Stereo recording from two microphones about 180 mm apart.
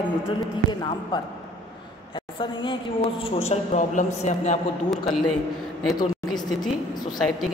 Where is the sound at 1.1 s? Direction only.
25° left (ahead or behind); by 4.6 s 40° left (ahead or behind).